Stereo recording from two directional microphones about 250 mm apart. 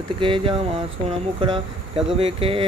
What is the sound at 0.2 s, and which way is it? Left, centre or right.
Speech, right.